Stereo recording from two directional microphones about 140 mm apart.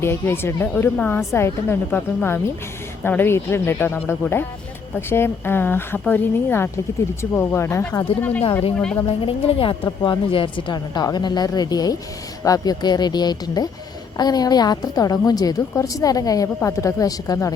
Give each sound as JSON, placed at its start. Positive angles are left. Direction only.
{"t": 0.0, "sound": "speech", "side_deg": 15}
{"t": 9.0, "sound": "a woman's voice", "side_deg": 40}